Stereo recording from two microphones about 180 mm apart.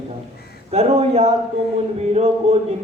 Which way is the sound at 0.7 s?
35° right (ahead or behind).